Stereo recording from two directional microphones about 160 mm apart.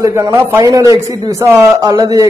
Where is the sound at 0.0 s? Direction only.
20° right (ahead or behind).